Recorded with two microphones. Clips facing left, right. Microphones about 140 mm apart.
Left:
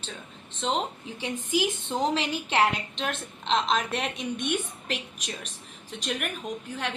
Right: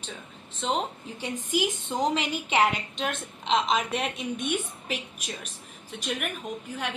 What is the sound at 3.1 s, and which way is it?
A woman's voice, 10° right (ahead or behind).